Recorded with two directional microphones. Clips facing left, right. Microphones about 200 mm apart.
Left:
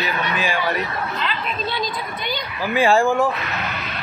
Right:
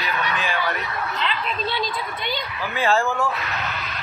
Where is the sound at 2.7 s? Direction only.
15° left (ahead or behind).